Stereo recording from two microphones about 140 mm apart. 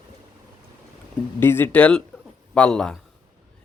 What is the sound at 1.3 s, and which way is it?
A man's voice, 15° left (ahead or behind).